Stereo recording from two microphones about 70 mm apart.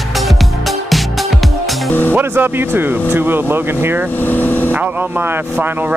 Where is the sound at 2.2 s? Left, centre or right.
Right.